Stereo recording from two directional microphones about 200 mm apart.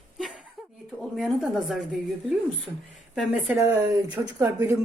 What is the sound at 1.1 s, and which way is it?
Speech, centre (ahead or behind).